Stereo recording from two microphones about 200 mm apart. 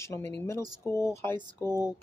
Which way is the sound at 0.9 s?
15° left (ahead or behind).